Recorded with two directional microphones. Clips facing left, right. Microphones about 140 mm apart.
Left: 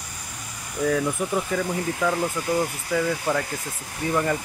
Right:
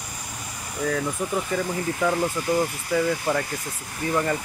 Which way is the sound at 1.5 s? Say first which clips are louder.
Even; 10° right (ahead or behind).